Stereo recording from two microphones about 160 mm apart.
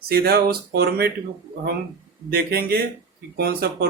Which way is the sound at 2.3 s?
70° right (ahead or behind).